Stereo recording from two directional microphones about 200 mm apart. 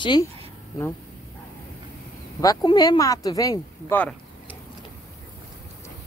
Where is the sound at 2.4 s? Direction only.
20° left (ahead or behind).